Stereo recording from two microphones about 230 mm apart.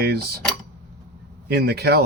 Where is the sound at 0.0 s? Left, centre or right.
Right.